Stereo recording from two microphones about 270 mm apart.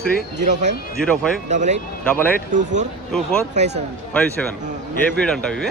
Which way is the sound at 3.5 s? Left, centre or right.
Right.